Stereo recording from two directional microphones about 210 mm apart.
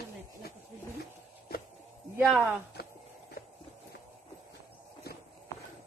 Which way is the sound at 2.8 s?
50° left (ahead or behind).